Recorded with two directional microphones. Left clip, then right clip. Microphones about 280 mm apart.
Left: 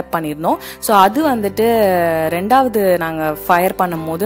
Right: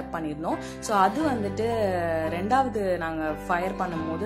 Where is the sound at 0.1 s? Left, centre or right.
Left.